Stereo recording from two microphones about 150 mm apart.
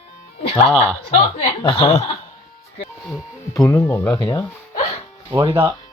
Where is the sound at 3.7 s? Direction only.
20° left (ahead or behind).